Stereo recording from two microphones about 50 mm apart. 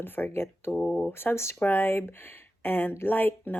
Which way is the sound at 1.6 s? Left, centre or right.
Left.